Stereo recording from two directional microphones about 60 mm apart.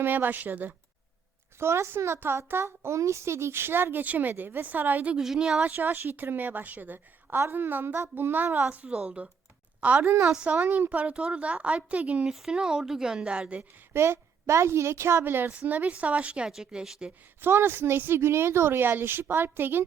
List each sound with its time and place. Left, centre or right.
0.0 s a child's voice: right
1.5 s a child's voice: right
5.1 s speech: centre
5.6 s a child's voice: right
8.7 s speech: right
10.0 s a child's voice: right
10.3 s speech: centre
12.3 s speech: centre
13.9 s a woman's voice: right
15.2 s a child's voice: right; by 16.5 s centre
16.5 s speech: centre
17.4 s a child's voice: right